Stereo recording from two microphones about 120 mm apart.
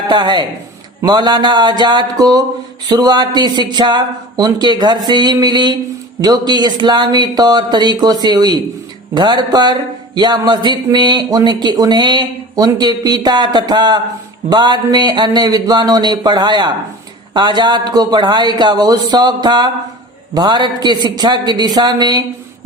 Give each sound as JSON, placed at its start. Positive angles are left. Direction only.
{"t": 0.1, "sound": "speech", "side_deg": -40}